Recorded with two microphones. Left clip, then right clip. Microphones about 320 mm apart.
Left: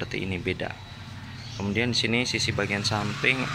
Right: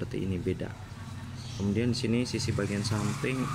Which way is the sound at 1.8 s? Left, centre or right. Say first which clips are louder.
Left 7 dB; centre.